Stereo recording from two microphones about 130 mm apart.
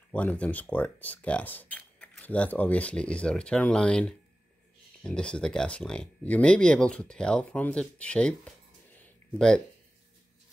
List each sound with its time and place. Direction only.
0.1 s speech: 10° left (ahead or behind)